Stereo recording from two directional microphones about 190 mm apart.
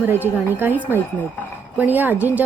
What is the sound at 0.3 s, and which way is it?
A woman's voice, 10° right (ahead or behind).